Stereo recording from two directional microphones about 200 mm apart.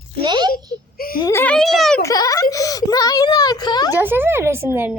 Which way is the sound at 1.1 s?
15° left (ahead or behind).